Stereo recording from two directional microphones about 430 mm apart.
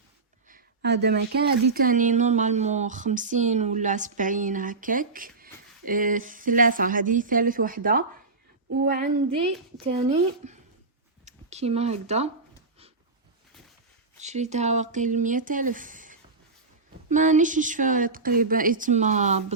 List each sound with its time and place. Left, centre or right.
0.4 s speech: right
14.2 s speech: centre